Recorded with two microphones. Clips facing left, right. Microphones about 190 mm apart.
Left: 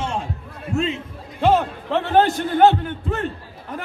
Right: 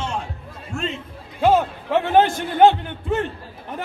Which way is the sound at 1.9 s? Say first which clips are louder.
Right 1 dB; 15° right (ahead or behind).